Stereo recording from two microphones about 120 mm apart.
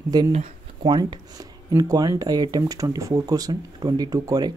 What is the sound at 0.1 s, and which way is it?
Speech, 30° right (ahead or behind).